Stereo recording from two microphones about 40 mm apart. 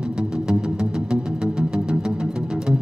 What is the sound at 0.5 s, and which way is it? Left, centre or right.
Music, centre.